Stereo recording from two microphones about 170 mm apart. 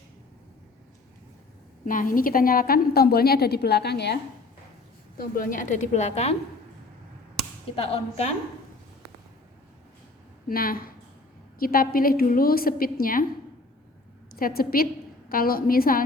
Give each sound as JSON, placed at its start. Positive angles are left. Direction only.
{"t": 1.8, "sound": "a woman's voice", "side_deg": 50}
{"t": 5.1, "sound": "a woman's voice", "side_deg": 60}
{"t": 7.8, "sound": "a woman's voice", "side_deg": 35}
{"t": 10.5, "sound": "a woman's voice", "side_deg": 60}
{"t": 14.3, "sound": "a woman's voice", "side_deg": 60}